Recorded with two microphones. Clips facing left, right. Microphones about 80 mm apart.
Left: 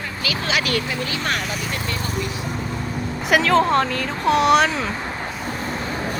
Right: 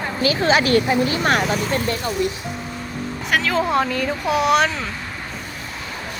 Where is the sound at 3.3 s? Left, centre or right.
Centre.